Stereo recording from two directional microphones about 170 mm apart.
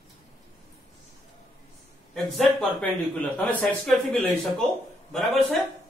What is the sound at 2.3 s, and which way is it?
A man's voice, 10° left (ahead or behind).